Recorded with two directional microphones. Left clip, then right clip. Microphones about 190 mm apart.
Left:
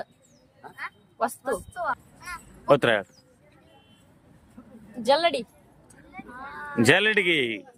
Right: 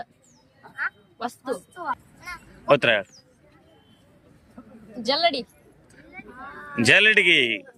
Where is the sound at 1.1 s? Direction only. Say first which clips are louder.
Left 3 dB; 20° left (ahead or behind).